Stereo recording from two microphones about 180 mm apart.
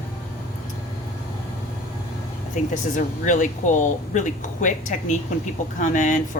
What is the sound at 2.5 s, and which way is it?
Speech, 45° left (ahead or behind).